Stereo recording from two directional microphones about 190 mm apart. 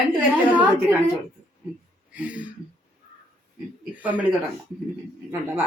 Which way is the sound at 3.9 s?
10° right (ahead or behind).